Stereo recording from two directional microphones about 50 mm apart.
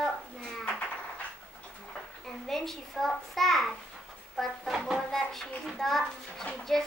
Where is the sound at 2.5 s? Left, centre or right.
Centre.